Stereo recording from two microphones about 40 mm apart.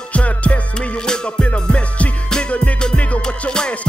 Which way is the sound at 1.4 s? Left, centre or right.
Left.